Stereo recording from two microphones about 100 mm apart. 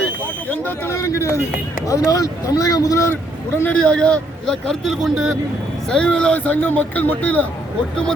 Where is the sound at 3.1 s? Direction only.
15° left (ahead or behind); by 5.3 s 5° right (ahead or behind).